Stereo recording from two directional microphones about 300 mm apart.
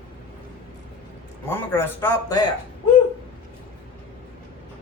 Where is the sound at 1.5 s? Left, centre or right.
Centre.